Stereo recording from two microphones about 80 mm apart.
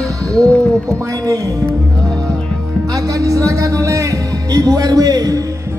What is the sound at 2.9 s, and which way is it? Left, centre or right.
Speech, right.